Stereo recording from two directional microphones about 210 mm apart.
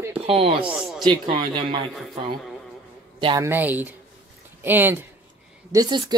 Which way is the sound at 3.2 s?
25° right (ahead or behind).